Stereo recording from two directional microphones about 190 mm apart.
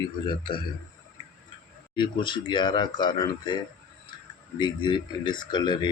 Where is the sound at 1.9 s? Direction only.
25° left (ahead or behind).